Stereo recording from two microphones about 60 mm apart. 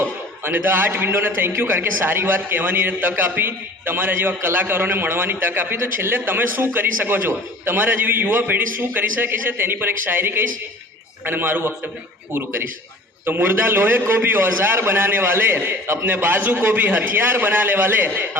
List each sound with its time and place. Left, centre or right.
0.0 s a man's voice: right